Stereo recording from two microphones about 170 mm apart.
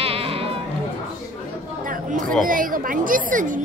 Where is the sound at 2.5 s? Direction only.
55° right (ahead or behind).